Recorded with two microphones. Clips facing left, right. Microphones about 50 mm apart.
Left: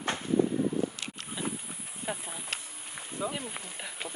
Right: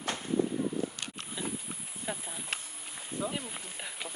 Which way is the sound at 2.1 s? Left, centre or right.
Left.